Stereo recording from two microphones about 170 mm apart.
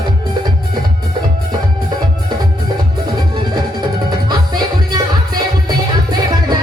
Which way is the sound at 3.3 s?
25° right (ahead or behind).